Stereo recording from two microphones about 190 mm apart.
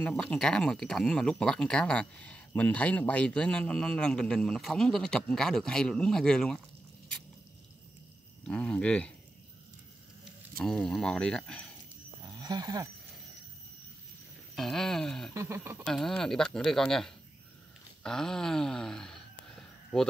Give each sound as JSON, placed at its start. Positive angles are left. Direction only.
{"t": 0.0, "sound": "speech", "side_deg": 5}
{"t": 8.5, "sound": "speech", "side_deg": 5}
{"t": 10.6, "sound": "speech", "side_deg": 5}
{"t": 12.4, "sound": "speech", "side_deg": -20}
{"t": 14.5, "sound": "speech", "side_deg": 0}
{"t": 15.3, "sound": "speech", "side_deg": -15}
{"t": 15.8, "sound": "speech", "side_deg": 0}